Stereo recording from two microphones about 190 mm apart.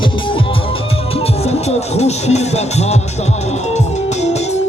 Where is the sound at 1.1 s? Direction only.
35° left (ahead or behind).